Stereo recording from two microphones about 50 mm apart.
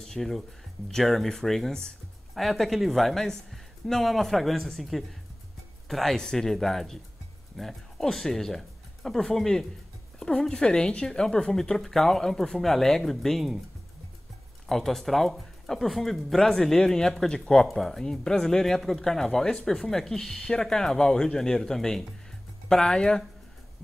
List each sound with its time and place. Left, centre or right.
0.0 s speech: centre
2.3 s speech: centre
14.7 s speech: centre